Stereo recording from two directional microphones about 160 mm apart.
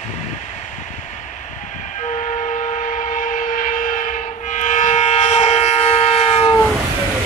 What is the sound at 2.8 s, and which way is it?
Train, 50° left (ahead or behind).